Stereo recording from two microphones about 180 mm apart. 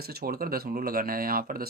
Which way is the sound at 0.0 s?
60° right (ahead or behind).